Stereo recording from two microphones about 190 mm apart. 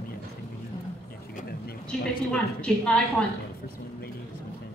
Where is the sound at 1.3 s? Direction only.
55° left (ahead or behind).